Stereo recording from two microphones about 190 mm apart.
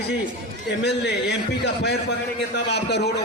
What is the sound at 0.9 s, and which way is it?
A man's voice, 65° left (ahead or behind).